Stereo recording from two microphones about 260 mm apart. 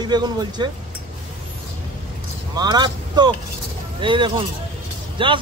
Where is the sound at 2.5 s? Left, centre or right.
Centre.